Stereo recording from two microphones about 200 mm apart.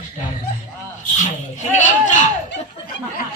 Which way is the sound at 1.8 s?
40° left (ahead or behind).